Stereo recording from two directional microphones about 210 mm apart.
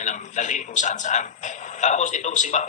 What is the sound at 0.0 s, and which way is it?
Speech, 35° left (ahead or behind).